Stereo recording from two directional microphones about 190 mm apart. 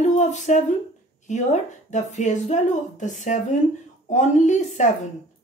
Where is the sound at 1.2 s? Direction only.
40° left (ahead or behind).